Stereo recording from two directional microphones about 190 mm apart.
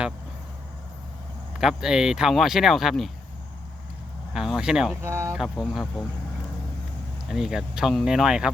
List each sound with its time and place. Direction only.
1.5 s speech: 5° right (ahead or behind)
4.4 s speech: centre (ahead or behind)
5.0 s speech: 15° right (ahead or behind)
5.4 s speech: centre (ahead or behind)
7.3 s speech: 5° right (ahead or behind)